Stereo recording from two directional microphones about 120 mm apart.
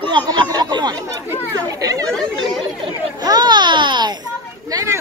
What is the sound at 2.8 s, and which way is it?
Speech, 35° right (ahead or behind).